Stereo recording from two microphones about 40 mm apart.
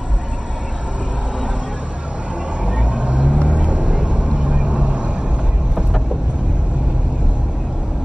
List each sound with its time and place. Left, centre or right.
2.6 s vehicle: right